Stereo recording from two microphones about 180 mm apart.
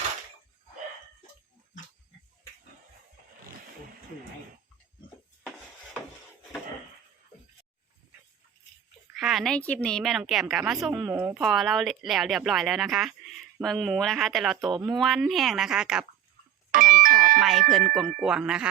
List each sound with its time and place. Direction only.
5.4 s music: centre (ahead or behind)
9.1 s speech: centre (ahead or behind)
16.7 s doorbell: 50° right (ahead or behind)
17.4 s speech: centre (ahead or behind)